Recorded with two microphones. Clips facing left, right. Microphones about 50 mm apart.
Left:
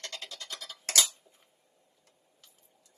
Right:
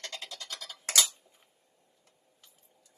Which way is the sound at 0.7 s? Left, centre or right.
Right.